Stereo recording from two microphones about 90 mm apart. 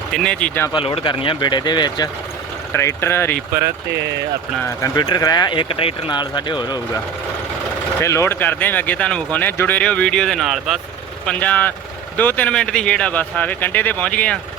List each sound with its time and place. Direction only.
0.1 s speech: 10° left (ahead or behind)
0.7 s speech: 85° left; by 2.0 s 55° left (ahead or behind)
2.7 s speech: 30° left (ahead or behind)
4.9 s speech: 50° left (ahead or behind); by 5.9 s 85° left
6.1 s speech: 55° left (ahead or behind)
8.0 s speech: 30° left (ahead or behind); by 10.8 s centre (ahead or behind)
11.3 s speech: 15° left (ahead or behind)